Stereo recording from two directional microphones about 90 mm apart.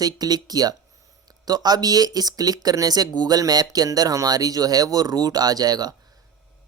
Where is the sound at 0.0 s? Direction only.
45° right (ahead or behind).